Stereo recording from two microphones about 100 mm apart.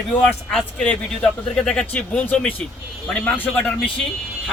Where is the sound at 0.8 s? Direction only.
10° left (ahead or behind).